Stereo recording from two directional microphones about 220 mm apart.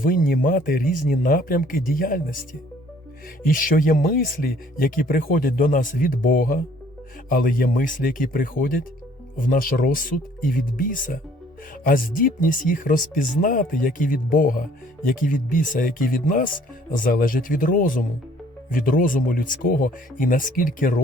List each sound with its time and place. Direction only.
0.0 s speech: 40° left (ahead or behind)
3.4 s speech: 40° left (ahead or behind)